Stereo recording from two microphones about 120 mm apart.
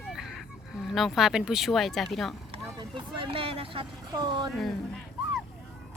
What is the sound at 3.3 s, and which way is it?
Speech, 50° right (ahead or behind).